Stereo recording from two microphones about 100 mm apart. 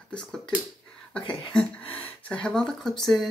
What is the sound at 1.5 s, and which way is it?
Speech, 15° left (ahead or behind).